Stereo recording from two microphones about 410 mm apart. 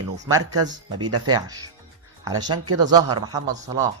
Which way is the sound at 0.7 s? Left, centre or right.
Centre.